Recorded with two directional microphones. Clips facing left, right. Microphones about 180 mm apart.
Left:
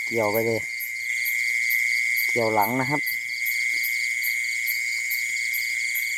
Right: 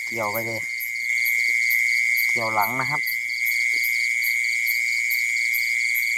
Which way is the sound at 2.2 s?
35° left (ahead or behind).